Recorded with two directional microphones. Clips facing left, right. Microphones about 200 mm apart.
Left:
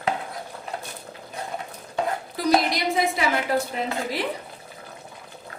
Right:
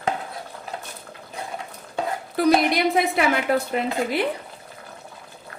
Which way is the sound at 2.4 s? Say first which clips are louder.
Right 7 dB; 60° right (ahead or behind).